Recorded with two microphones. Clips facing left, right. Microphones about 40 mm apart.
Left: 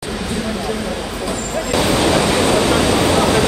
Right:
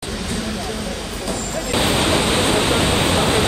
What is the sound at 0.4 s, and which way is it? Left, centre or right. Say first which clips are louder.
Vehicle: left 4 dB; centre.